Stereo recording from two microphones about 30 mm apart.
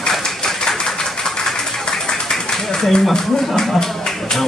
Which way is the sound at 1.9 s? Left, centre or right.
Left.